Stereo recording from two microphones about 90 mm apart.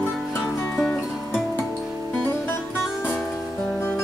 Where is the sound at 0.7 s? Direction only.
15° left (ahead or behind).